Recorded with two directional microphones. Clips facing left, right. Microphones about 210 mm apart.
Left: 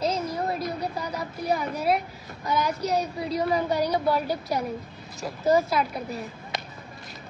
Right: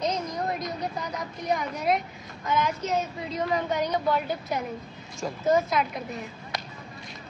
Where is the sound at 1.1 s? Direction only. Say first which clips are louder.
Left 2 dB; 5° left (ahead or behind).